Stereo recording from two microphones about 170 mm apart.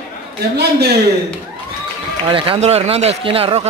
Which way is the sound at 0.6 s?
75° right (ahead or behind).